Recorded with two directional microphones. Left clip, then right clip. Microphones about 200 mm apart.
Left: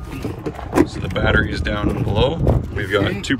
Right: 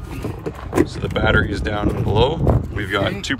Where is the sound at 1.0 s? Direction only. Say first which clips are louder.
Even; 5° right (ahead or behind).